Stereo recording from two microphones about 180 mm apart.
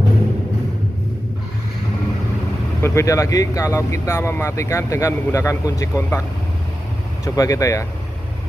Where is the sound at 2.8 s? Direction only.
15° left (ahead or behind).